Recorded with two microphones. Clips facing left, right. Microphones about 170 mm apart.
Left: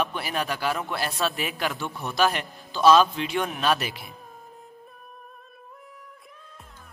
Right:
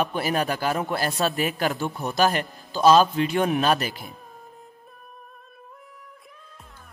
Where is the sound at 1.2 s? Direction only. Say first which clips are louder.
Right 3 dB; centre (ahead or behind).